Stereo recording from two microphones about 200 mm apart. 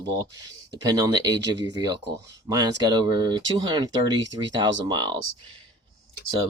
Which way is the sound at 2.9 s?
20° right (ahead or behind).